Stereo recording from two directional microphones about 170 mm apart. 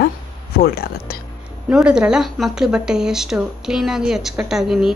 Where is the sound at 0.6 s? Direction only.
65° left (ahead or behind).